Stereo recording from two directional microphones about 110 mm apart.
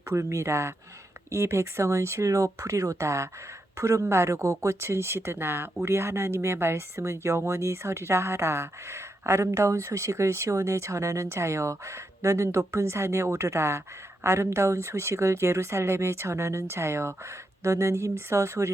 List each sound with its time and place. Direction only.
0.1 s speech: 25° right (ahead or behind)